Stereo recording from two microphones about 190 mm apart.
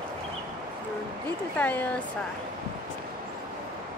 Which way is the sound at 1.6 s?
10° left (ahead or behind).